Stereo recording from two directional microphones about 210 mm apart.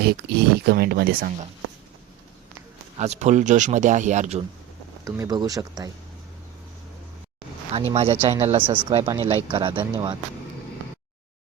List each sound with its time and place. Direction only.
0.0 s speech: 50° right (ahead or behind)
3.0 s speech: 35° right (ahead or behind)
5.0 s speech: 15° right (ahead or behind)
7.9 s speech: 25° right (ahead or behind)